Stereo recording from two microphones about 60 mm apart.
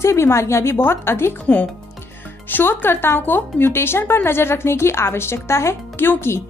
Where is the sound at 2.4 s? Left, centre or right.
Left.